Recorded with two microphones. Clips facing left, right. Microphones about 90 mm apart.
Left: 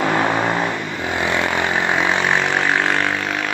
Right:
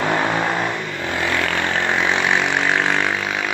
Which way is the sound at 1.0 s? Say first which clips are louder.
Left 2 dB; 20° left (ahead or behind).